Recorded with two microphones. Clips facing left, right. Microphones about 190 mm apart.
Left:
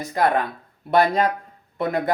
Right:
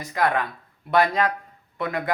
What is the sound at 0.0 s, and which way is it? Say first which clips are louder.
Speech: left 3 dB; 30° left (ahead or behind).